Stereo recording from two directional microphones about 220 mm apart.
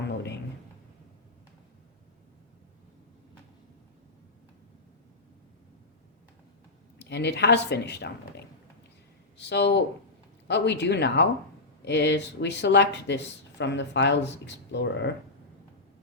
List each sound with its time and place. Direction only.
7.0 s speech: 50° left (ahead or behind)